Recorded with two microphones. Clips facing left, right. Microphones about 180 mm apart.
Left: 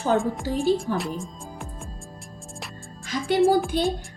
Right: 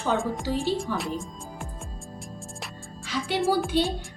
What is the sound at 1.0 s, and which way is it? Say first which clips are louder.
Music: left 1 dB; centre (ahead or behind).